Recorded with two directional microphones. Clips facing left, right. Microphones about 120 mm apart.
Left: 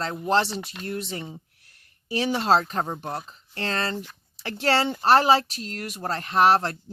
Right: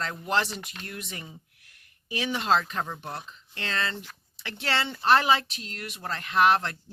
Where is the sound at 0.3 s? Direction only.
30° left (ahead or behind).